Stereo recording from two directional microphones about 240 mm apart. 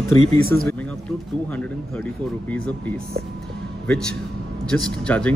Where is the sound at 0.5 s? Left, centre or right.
Centre.